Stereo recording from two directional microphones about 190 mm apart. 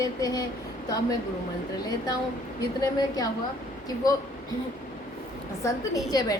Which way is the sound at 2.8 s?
20° left (ahead or behind).